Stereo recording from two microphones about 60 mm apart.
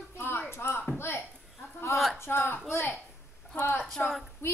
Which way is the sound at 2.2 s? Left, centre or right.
Left.